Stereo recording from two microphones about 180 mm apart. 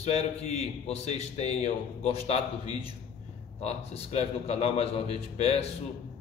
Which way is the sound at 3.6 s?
35° left (ahead or behind).